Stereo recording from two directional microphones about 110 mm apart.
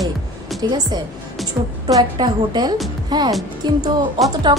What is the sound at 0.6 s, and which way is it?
A woman's voice, 40° right (ahead or behind).